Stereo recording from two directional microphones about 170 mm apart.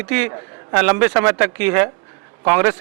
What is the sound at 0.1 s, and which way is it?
A man's voice, 10° right (ahead or behind).